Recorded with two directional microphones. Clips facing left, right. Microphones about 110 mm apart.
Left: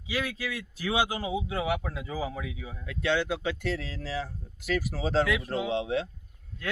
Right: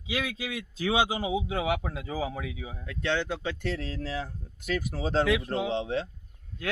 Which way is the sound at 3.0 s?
10° left (ahead or behind).